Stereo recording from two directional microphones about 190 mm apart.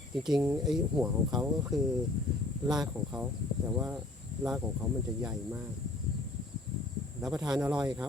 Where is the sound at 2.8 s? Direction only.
5° right (ahead or behind).